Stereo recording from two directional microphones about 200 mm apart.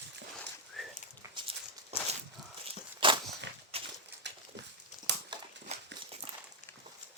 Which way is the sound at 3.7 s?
30° right (ahead or behind).